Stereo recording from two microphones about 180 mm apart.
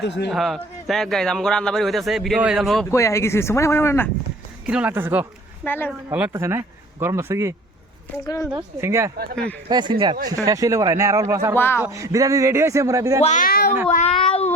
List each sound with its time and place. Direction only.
0.3 s a man's voice: centre (ahead or behind)
2.9 s speech: 15° left (ahead or behind)
4.6 s speech: 5° right (ahead or behind)
5.6 s speech: 10° left (ahead or behind)
5.9 s speech: 10° right (ahead or behind)
8.2 s speech: 20° left (ahead or behind)
8.5 s speech: 15° right (ahead or behind)
11.5 s speech: 10° left (ahead or behind)
11.8 s speech: 15° right (ahead or behind)
13.2 s speech: 45° left (ahead or behind)
13.9 s speech: 35° left (ahead or behind)